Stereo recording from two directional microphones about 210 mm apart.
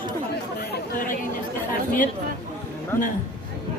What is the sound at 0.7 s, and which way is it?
Chatter, 40° left (ahead or behind).